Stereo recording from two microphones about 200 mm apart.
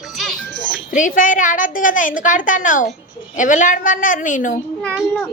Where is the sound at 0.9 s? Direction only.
40° left (ahead or behind).